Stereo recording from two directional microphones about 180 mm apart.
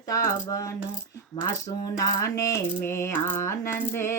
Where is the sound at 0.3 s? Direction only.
20° left (ahead or behind).